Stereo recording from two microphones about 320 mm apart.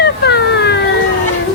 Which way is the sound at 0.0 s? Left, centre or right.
Left.